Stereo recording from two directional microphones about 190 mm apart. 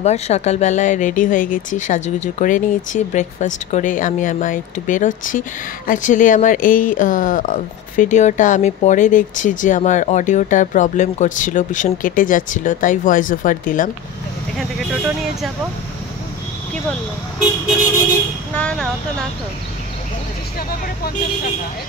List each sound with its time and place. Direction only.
0.0 s speech: 35° left (ahead or behind)
14.6 s vehicle: 5° right (ahead or behind)
18.5 s speech: 5° left (ahead or behind)